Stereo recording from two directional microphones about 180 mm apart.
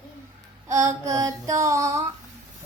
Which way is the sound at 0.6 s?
15° right (ahead or behind).